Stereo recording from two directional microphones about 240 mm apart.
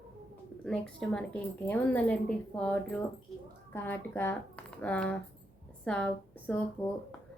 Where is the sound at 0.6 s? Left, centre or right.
Centre.